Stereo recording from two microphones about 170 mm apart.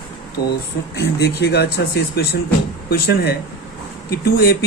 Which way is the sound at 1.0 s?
75° left (ahead or behind).